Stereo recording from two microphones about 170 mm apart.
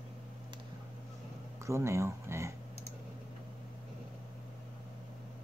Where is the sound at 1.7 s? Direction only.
15° right (ahead or behind).